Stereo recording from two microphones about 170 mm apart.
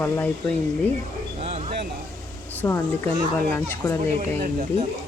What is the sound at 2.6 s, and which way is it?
A child's voice, 20° left (ahead or behind).